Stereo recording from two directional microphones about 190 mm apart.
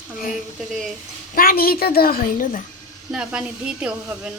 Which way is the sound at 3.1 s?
5° right (ahead or behind).